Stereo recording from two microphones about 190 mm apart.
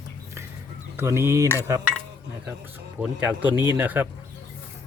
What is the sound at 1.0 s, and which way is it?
Speech, 15° right (ahead or behind).